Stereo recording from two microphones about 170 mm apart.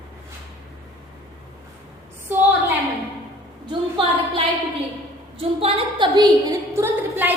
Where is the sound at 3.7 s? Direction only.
30° right (ahead or behind).